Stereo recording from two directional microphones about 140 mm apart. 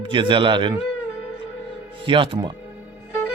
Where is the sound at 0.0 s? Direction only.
35° right (ahead or behind).